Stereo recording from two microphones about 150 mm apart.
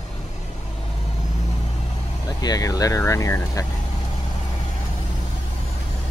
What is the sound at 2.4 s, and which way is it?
Speech, 25° left (ahead or behind).